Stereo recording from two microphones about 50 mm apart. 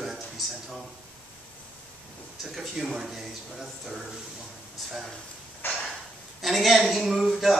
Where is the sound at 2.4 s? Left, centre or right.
Centre.